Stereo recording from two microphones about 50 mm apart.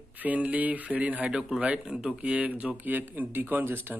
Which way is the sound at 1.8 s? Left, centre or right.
Centre.